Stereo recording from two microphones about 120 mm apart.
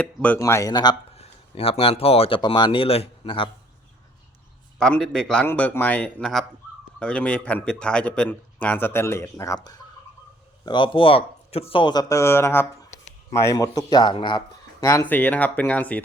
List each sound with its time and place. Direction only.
0.0 s speech: 10° left (ahead or behind)
0.3 s speech: 25° left (ahead or behind)
1.1 s speech: 55° left (ahead or behind)
2.4 s speech: 40° left (ahead or behind)
4.8 s a man's voice: 5° left (ahead or behind); by 9.8 s 30° left (ahead or behind)
10.7 s speech: 45° left (ahead or behind)
12.0 s speech: 25° left (ahead or behind); by 14.4 s 40° left (ahead or behind)
14.8 s speech: 25° left (ahead or behind)
15.0 s speech: 15° left (ahead or behind)